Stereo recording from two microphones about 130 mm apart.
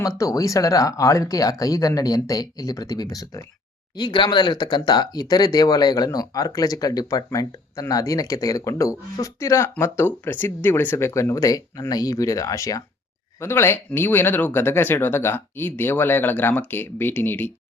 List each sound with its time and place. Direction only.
0.0 s speech: 25° left (ahead or behind)